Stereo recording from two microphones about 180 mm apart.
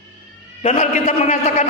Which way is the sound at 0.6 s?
35° left (ahead or behind).